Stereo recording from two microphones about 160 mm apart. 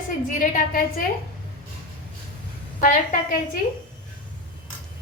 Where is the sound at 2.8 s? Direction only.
60° left (ahead or behind).